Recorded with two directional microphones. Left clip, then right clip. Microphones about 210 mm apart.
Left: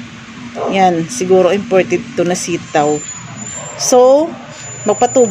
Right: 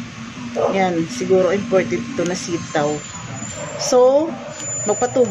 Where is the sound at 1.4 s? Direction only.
45° left (ahead or behind).